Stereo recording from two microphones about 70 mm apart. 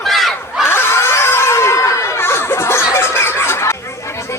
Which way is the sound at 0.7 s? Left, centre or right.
Left.